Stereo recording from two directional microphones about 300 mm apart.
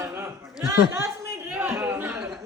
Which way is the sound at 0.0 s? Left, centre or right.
Centre.